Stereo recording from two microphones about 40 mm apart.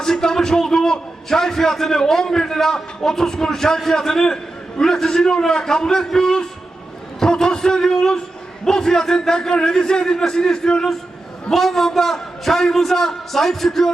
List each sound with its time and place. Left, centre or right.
0.0 s a man's voice: centre
11.5 s a man's voice: centre